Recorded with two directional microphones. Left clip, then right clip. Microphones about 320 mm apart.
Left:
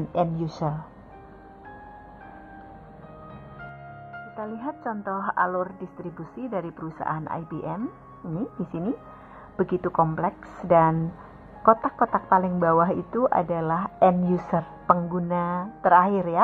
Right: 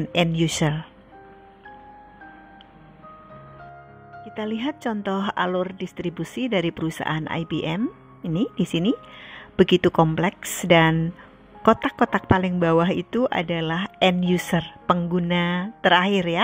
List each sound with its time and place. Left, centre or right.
0.6 s a woman's voice: right
4.4 s a woman's voice: right